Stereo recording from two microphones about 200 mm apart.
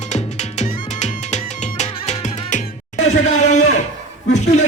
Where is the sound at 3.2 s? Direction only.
35° left (ahead or behind).